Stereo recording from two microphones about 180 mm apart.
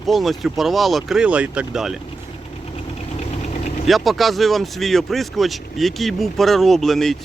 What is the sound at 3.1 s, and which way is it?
Engine, 40° left (ahead or behind).